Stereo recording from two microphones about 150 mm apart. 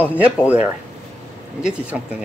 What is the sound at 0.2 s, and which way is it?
Speech, 10° right (ahead or behind).